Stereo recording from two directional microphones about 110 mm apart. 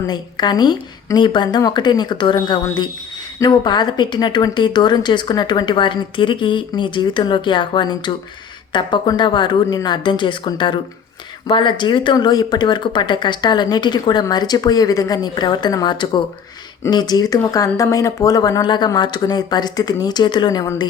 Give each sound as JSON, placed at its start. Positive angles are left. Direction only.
{"t": 0.1, "sound": "speech", "side_deg": 40}
{"t": 12.1, "sound": "speech", "side_deg": 35}